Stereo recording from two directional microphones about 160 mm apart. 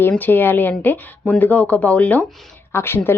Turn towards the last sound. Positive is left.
turn(degrees=15)  # may be behind; listen again after turning